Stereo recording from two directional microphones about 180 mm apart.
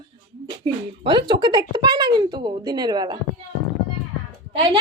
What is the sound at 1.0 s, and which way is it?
A woman's voice, 25° right (ahead or behind).